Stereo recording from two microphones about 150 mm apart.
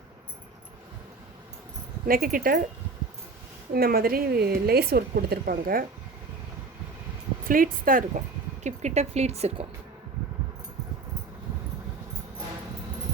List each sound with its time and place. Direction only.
2.0 s speech: 75° right (ahead or behind)
3.7 s speech: 90° right
7.4 s speech: 70° right (ahead or behind)
8.6 s speech: 50° right (ahead or behind)